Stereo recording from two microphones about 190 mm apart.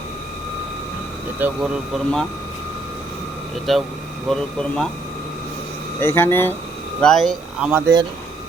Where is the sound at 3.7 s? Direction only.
Centre (ahead or behind).